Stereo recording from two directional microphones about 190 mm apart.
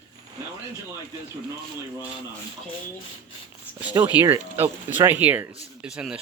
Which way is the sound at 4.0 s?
15° right (ahead or behind).